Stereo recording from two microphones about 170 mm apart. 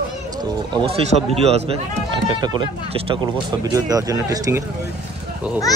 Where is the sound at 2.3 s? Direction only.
25° right (ahead or behind).